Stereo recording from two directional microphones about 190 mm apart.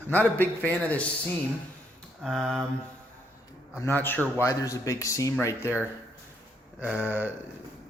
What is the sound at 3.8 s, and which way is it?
Speech, 10° left (ahead or behind).